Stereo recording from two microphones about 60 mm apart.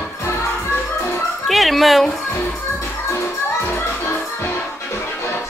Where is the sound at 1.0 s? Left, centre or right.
Left.